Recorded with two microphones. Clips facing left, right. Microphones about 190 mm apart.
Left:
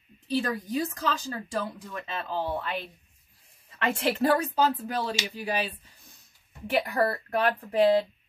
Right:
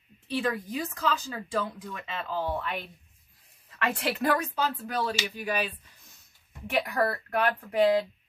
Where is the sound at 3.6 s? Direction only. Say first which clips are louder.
Left 3 dB; 25° left (ahead or behind).